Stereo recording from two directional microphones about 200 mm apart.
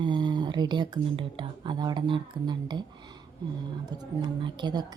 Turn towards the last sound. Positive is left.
turn(degrees=-20)  # may be behind; listen again after turning